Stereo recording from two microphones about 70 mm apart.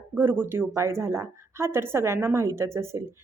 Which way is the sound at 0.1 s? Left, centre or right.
Right.